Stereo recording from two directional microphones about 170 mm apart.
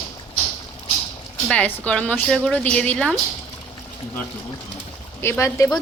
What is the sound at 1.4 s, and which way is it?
A woman's voice, 10° left (ahead or behind).